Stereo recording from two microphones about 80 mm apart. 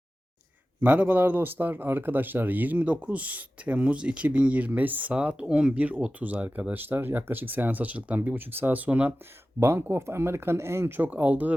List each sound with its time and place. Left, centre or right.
0.8 s speech: centre
9.6 s speech: right